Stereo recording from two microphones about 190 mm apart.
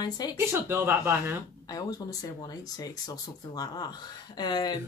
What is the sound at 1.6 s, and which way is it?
Speech, 20° left (ahead or behind).